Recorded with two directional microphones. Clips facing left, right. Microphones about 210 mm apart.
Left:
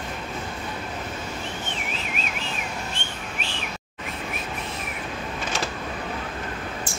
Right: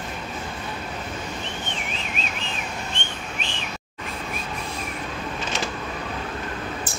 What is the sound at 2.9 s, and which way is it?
Whistling, 5° left (ahead or behind).